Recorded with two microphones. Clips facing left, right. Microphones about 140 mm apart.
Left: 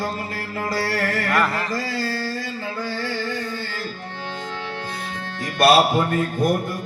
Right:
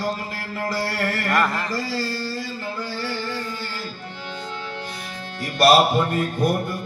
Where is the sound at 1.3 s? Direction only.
5° left (ahead or behind).